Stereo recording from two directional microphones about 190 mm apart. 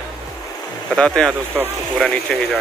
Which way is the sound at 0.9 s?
5° left (ahead or behind).